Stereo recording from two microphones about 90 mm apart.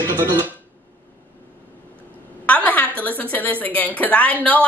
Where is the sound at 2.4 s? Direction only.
15° left (ahead or behind).